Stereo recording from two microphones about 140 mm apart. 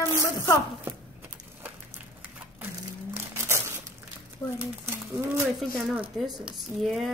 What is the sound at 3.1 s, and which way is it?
Crumpling, 20° right (ahead or behind).